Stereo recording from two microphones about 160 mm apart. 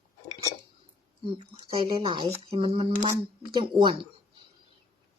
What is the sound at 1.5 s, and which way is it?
Speech, 35° right (ahead or behind).